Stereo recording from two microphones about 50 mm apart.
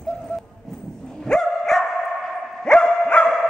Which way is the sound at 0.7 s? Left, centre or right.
Centre.